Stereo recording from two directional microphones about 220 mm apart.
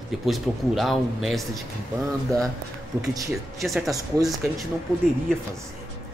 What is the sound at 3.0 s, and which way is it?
Speech, 15° right (ahead or behind).